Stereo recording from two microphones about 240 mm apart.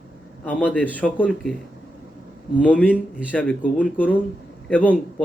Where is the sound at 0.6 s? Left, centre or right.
Centre.